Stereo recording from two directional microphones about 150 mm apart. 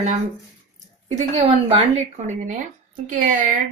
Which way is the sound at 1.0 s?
45° right (ahead or behind).